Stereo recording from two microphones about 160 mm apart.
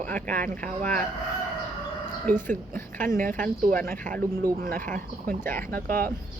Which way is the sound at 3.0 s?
60° right (ahead or behind).